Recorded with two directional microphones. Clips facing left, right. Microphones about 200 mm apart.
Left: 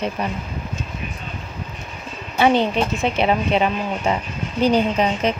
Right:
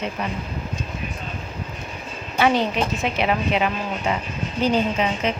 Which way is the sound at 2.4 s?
25° left (ahead or behind).